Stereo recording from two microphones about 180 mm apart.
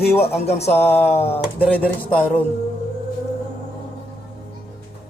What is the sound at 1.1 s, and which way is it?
Speech, 35° left (ahead or behind).